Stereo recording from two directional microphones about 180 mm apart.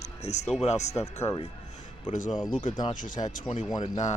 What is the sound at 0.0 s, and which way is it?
Music, 35° left (ahead or behind).